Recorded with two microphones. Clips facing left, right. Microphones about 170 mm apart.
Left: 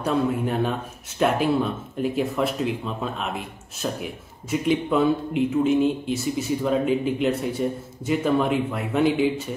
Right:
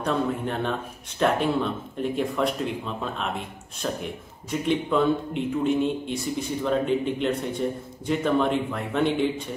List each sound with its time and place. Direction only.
0.0 s a man's voice: 5° left (ahead or behind)